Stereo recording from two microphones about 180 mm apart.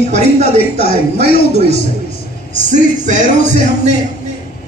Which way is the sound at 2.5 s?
40° right (ahead or behind).